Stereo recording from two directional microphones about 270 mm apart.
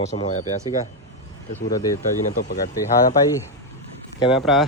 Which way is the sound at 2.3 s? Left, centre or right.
Left.